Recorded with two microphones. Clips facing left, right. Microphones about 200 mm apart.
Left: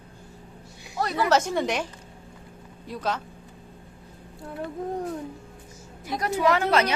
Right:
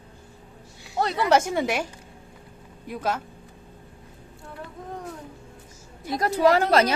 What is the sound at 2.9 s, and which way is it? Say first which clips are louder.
Speech: right 1 dB; 10° right (ahead or behind).